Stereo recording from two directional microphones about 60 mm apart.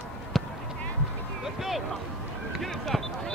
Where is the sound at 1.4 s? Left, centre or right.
Centre.